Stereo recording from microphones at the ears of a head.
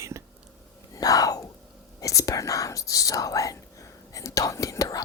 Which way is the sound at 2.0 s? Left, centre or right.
Left.